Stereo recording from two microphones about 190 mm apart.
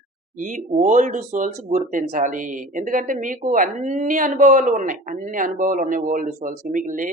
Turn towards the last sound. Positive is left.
turn(degrees=-45)  # may be behind; listen again after turning